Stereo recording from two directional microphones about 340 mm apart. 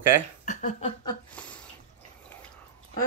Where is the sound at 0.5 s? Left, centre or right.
Left.